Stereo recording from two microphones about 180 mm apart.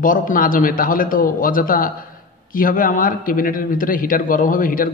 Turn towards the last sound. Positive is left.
turn(degrees=50)  # may be behind; listen again after turning